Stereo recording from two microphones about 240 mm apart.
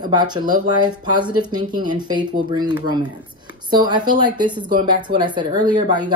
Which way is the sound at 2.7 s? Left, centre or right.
Centre.